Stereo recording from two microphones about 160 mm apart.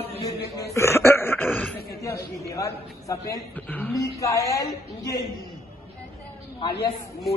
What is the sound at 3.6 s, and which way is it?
A man's voice, 10° left (ahead or behind).